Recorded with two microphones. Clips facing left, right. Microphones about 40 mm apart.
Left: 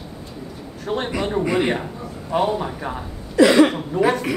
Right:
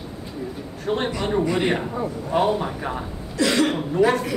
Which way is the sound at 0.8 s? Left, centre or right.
Centre.